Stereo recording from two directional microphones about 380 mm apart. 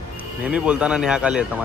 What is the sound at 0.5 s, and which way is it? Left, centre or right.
Speech, centre.